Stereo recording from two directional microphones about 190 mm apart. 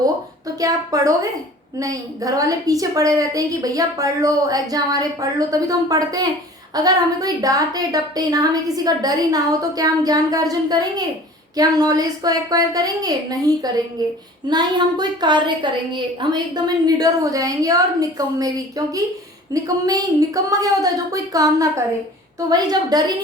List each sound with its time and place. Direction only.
0.0 s a woman's voice: 20° right (ahead or behind)